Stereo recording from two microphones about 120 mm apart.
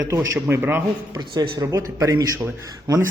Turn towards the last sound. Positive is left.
turn(degrees=-30)  # may be behind; listen again after turning